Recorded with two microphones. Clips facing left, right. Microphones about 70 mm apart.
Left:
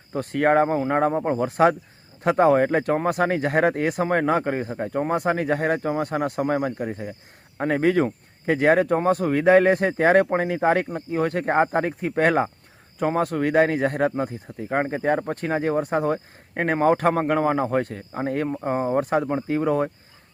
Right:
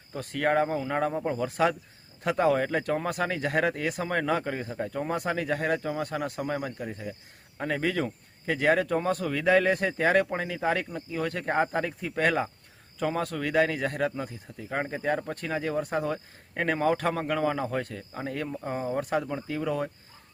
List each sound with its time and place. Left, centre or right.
0.1 s speech: left